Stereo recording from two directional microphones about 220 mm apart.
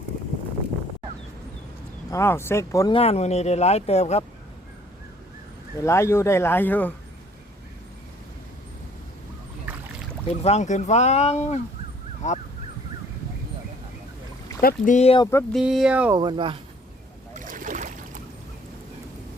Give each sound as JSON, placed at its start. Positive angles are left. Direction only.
{"t": 2.0, "sound": "speech", "side_deg": 10}
{"t": 3.0, "sound": "speech", "side_deg": 30}
{"t": 5.8, "sound": "speech", "side_deg": 10}
{"t": 9.7, "sound": "boat", "side_deg": -5}
{"t": 10.2, "sound": "speech", "side_deg": 30}
{"t": 14.6, "sound": "speech", "side_deg": 40}
{"t": 15.5, "sound": "speech", "side_deg": 0}
{"t": 16.1, "sound": "speech", "side_deg": -20}
{"t": 17.3, "sound": "boat", "side_deg": -35}